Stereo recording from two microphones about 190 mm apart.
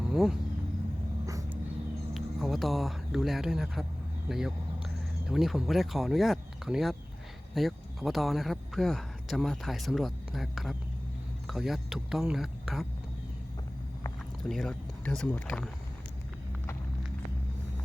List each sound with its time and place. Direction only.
0.0 s vehicle: centre (ahead or behind)
1.3 s dog: 15° right (ahead or behind)
2.1 s speech: centre (ahead or behind)
4.3 s a sound: centre (ahead or behind)
5.3 s speech: 5° right (ahead or behind)
14.4 s speech: centre (ahead or behind)